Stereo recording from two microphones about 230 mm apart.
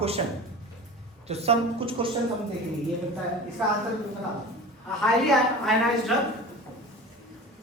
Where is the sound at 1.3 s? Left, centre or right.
Right.